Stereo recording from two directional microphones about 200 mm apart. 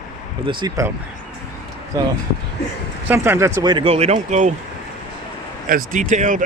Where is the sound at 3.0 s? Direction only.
10° right (ahead or behind); by 4.5 s 35° right (ahead or behind).